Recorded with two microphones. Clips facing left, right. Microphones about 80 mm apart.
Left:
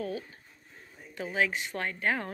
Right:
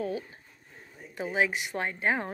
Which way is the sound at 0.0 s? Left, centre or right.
Right.